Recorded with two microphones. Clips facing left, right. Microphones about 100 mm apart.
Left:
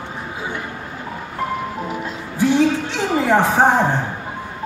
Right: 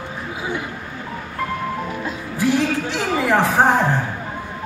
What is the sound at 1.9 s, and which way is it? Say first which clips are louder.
Music: even; 25° left (ahead or behind).